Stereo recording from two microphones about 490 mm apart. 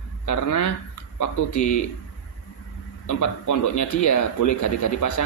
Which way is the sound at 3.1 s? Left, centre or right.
Left.